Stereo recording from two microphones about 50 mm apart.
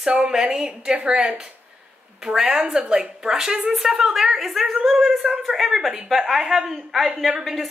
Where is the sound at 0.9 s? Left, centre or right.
Centre.